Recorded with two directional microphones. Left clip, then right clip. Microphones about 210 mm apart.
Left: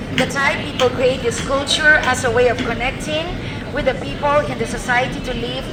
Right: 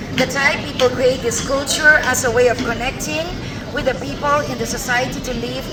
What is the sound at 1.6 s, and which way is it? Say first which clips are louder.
A woman's voice: right 1 dB; 40° right (ahead or behind).